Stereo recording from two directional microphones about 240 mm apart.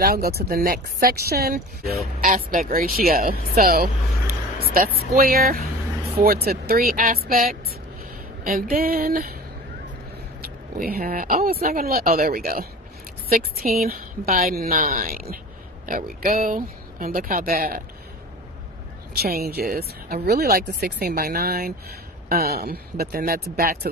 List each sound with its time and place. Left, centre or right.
0.0 s speech: right
5.1 s speech: right
10.4 s a woman's voice: right
19.1 s speech: right